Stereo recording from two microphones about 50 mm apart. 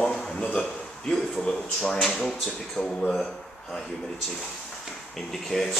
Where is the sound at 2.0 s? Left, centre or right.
Centre.